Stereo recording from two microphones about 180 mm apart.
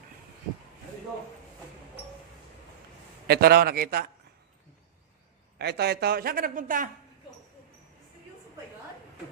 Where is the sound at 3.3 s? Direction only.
60° right (ahead or behind).